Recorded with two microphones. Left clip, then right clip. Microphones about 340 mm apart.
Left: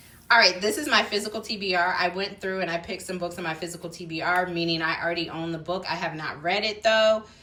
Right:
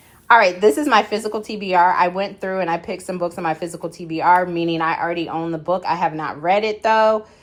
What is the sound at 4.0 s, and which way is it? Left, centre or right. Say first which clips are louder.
Speech: right 10 dB; right.